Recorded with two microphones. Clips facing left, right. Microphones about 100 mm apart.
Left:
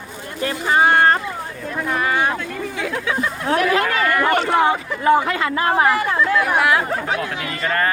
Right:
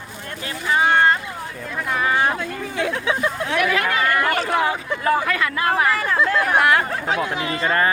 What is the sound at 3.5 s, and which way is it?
Speech, 35° left (ahead or behind).